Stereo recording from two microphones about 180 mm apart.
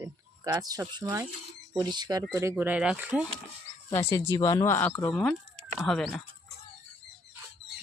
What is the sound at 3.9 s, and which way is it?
Speech, 15° left (ahead or behind).